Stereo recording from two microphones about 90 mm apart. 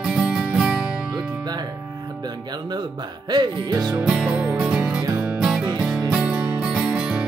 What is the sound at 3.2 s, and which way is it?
Music, 50° right (ahead or behind).